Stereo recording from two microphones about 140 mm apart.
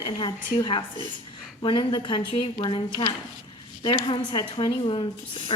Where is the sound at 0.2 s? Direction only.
35° left (ahead or behind).